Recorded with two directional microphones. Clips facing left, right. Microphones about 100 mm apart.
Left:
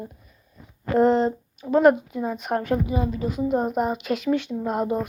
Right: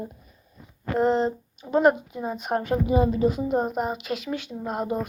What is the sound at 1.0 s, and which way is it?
Speech, 20° right (ahead or behind).